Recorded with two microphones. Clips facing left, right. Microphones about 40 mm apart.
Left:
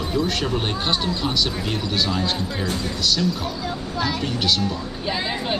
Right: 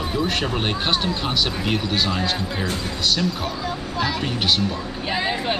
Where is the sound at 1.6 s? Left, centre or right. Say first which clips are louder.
Right 2 dB; centre.